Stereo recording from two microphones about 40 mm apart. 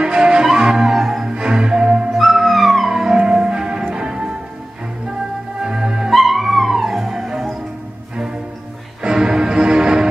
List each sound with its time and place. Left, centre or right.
0.0 s music: right
1.3 s music: right
2.1 s music: centre
2.9 s music: centre
5.6 s music: centre
6.1 s music: centre
9.0 s music: centre